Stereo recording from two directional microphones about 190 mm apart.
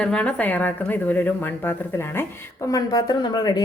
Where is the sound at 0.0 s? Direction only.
5° left (ahead or behind).